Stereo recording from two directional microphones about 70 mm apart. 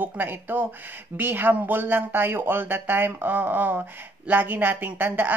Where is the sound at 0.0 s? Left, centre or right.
Right.